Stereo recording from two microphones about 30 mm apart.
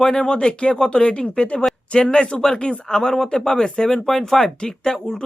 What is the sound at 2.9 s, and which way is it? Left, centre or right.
Speech, centre.